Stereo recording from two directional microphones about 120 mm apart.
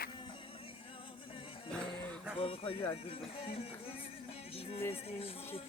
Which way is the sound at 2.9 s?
55° left (ahead or behind).